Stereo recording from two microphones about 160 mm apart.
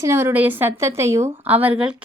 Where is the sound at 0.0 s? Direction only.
15° right (ahead or behind).